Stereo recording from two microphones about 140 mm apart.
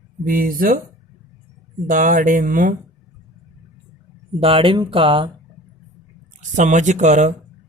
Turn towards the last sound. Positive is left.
turn(degrees=-60)  # may be behind; listen again after turning